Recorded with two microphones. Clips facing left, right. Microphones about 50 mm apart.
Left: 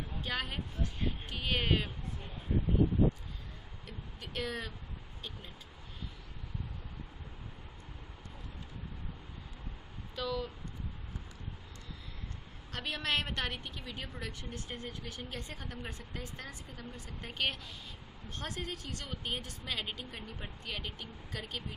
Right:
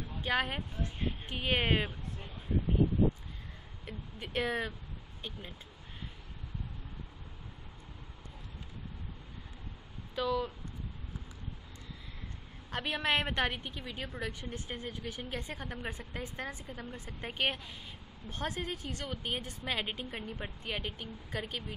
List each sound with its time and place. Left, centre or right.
0.2 s speech: centre
3.8 s speech: right
10.1 s speech: centre
12.7 s a woman's voice: centre